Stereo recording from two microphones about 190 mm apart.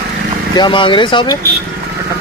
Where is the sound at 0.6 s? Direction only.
25° left (ahead or behind).